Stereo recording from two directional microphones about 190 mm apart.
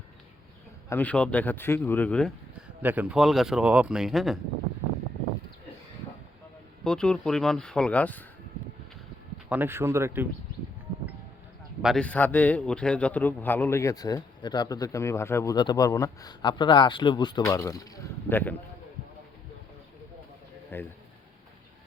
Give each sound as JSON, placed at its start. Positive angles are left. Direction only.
{"t": 0.9, "sound": "a man's voice", "side_deg": 10}
{"t": 2.8, "sound": "speech", "side_deg": -10}
{"t": 6.8, "sound": "speech", "side_deg": 5}
{"t": 9.5, "sound": "speech", "side_deg": -10}
{"t": 11.8, "sound": "a man's voice", "side_deg": 0}
{"t": 20.7, "sound": "a sound", "side_deg": 10}